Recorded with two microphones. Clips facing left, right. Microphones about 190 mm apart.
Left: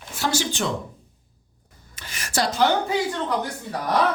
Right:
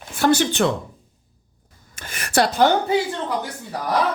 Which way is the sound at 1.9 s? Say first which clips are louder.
Right 6 dB; 50° right (ahead or behind).